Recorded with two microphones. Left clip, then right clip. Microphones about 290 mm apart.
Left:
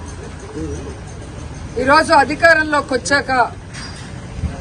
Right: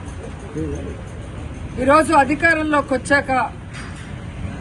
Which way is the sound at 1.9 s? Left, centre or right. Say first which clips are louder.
Left 2 dB; centre.